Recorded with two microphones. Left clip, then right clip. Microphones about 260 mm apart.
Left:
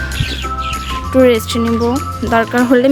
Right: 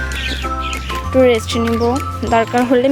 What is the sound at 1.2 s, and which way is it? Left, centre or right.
Speech, centre.